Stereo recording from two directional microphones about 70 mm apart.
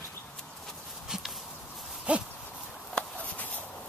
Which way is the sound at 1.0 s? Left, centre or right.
Centre.